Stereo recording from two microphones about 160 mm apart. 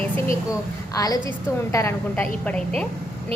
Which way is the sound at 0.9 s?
25° left (ahead or behind).